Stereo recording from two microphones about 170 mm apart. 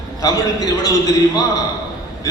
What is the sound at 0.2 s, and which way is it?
A man's voice, 20° left (ahead or behind).